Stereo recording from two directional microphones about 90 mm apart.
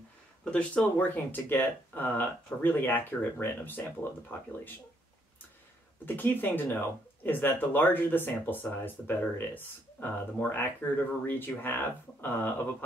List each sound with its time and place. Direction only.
0.5 s speech: 15° left (ahead or behind)
6.0 s speech: 20° left (ahead or behind)